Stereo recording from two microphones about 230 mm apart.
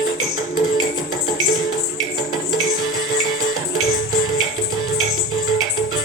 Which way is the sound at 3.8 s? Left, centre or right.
Left.